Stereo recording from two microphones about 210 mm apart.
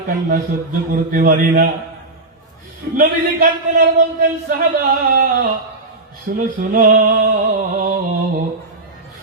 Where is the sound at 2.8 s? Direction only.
55° right (ahead or behind).